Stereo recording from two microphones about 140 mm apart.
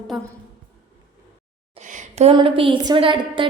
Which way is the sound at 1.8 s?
60° right (ahead or behind).